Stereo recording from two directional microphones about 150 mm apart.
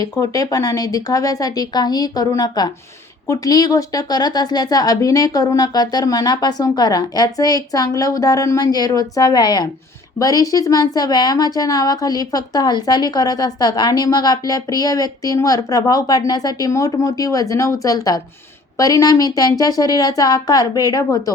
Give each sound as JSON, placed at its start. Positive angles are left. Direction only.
{"t": 0.0, "sound": "a woman's voice", "side_deg": 25}